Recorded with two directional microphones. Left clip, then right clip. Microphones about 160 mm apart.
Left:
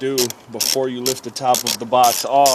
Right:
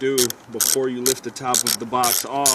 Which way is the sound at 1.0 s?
40° left (ahead or behind).